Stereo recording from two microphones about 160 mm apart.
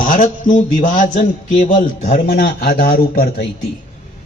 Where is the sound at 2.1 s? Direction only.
70° left (ahead or behind).